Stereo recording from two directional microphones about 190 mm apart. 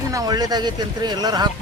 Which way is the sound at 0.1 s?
20° right (ahead or behind).